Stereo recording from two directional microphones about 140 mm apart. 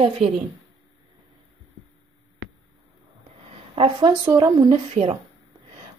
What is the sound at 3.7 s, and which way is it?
Speech, 40° right (ahead or behind).